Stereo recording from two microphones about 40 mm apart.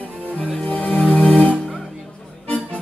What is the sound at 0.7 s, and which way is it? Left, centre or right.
Music, left.